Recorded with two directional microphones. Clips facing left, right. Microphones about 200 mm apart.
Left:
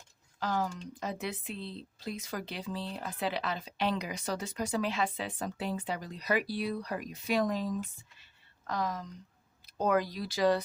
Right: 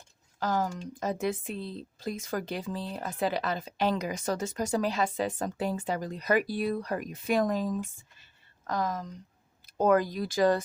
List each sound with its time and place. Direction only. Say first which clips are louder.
0.3 s speech: right 3 dB; 45° right (ahead or behind)
8.2 s a sound: right 2 dB; 45° right (ahead or behind)
9.6 s speech: right 5 dB; 50° right (ahead or behind)